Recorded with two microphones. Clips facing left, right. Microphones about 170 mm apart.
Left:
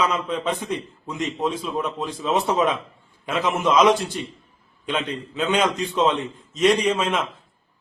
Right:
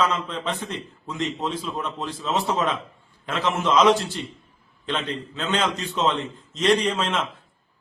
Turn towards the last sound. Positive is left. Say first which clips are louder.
# left 2 dB
turn(degrees=10)  # may be behind; listen again after turning